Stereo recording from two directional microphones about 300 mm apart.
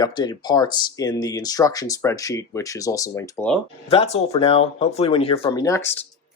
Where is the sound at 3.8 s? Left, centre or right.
Left.